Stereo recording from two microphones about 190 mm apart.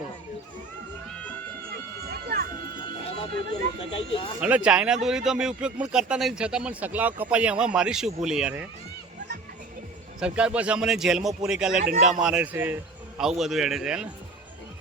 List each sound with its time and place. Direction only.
2.0 s a sound: 55° right (ahead or behind)
3.9 s speech: 30° left (ahead or behind)
4.4 s speech: 5° right (ahead or behind)
10.2 s speech: 5° right (ahead or behind)
11.8 s a man's voice: 45° right (ahead or behind)
12.2 s speech: 5° right (ahead or behind)